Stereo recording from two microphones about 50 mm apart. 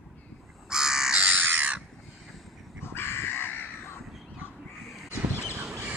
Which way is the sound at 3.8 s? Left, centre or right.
Left.